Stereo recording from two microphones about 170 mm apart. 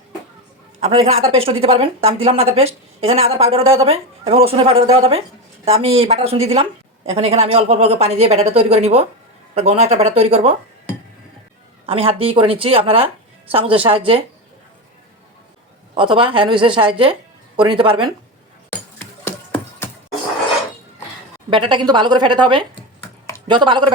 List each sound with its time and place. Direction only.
0.8 s speech: 35° right (ahead or behind)
16.0 s a woman's voice: 30° right (ahead or behind)
19.5 s a sound: 10° left (ahead or behind)
21.5 s a woman's voice: 30° right (ahead or behind)